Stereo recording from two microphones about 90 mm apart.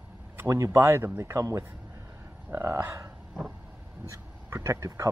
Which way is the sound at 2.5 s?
30° right (ahead or behind).